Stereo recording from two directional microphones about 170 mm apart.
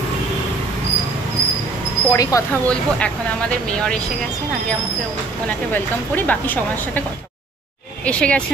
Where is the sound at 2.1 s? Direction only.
20° left (ahead or behind).